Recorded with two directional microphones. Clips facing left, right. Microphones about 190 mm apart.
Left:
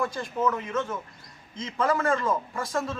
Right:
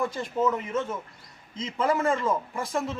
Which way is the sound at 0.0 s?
20° right (ahead or behind).